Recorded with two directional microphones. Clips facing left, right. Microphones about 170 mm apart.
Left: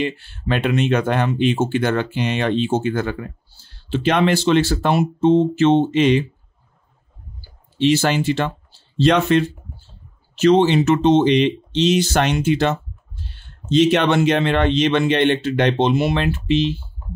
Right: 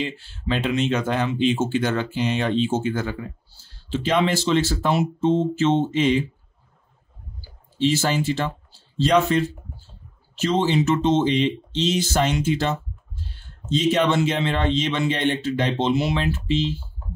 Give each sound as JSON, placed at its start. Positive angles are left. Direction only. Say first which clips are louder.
{"t": 0.0, "sound": "speech", "louder": "left 5 dB", "side_deg": 60}
{"t": 7.7, "sound": "speech", "louder": "left 4 dB", "side_deg": 70}